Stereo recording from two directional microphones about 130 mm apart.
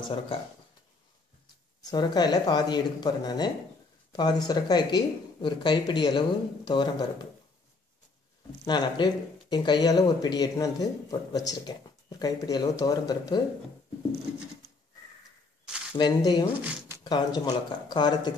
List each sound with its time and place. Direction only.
1.8 s speech: 30° left (ahead or behind)
8.6 s speech: 35° left (ahead or behind)
16.0 s speech: 35° left (ahead or behind)